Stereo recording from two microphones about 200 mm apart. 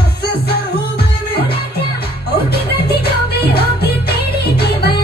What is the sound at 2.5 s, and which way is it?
Music, 50° left (ahead or behind).